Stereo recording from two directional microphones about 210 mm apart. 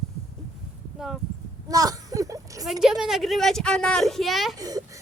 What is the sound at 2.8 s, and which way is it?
A woman's voice, centre (ahead or behind).